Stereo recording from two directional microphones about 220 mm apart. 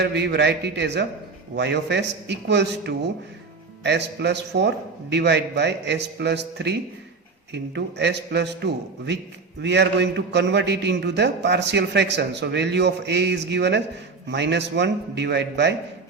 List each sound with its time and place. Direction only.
0.0 s a man's voice: 50° right (ahead or behind)